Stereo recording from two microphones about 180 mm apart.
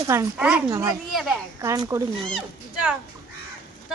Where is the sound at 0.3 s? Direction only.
5° right (ahead or behind).